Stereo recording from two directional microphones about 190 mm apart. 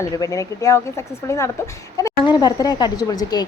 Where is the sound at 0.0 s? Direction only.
15° left (ahead or behind).